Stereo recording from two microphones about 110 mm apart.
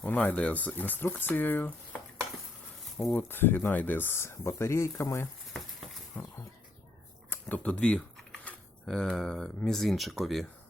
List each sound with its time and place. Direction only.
0.0 s speech: 15° left (ahead or behind)
3.2 s speech: 20° left (ahead or behind)
6.2 s speech: 15° left (ahead or behind)
7.3 s typing: 15° left (ahead or behind)
9.6 s speech: centre (ahead or behind)